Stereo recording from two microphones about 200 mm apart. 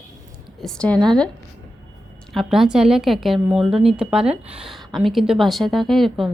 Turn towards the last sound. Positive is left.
turn(degrees=0)  # may be behind; listen again after turning